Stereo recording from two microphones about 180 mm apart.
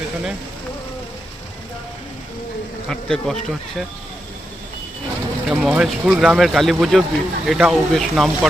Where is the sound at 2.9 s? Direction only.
5° left (ahead or behind).